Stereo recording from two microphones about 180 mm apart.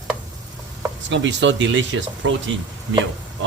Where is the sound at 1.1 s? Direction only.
80° right.